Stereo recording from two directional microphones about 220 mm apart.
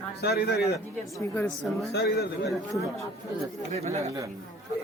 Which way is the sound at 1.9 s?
45° left (ahead or behind).